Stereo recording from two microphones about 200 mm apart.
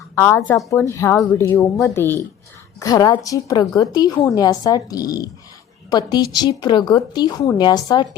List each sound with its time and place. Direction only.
0.2 s a woman's voice: 10° left (ahead or behind)